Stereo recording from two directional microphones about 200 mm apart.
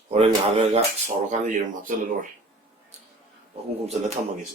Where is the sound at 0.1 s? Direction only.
30° right (ahead or behind).